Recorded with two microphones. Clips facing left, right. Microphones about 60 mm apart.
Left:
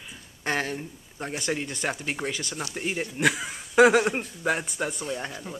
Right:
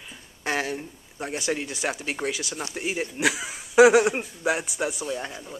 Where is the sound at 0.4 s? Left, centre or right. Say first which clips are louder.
Right 1 dB; centre.